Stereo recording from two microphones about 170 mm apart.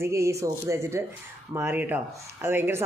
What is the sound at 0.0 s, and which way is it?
Speech, 15° right (ahead or behind).